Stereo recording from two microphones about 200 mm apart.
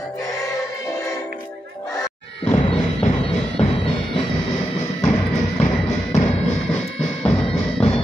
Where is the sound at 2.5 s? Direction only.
30° left (ahead or behind).